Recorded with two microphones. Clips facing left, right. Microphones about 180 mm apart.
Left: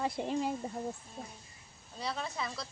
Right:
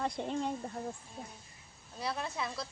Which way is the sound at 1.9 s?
5° right (ahead or behind).